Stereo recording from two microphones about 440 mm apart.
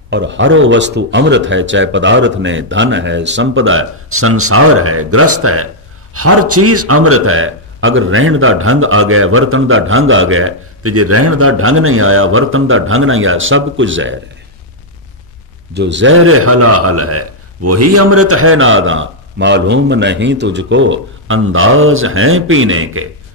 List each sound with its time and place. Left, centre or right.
0.1 s a man's voice: right
15.7 s a man's voice: right